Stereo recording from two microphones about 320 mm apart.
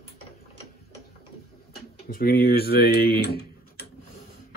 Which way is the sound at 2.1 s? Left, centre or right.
Left.